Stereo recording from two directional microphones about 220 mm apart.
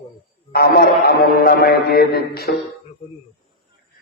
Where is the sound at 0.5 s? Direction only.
45° left (ahead or behind).